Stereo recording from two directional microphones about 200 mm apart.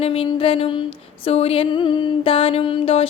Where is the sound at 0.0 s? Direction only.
30° left (ahead or behind).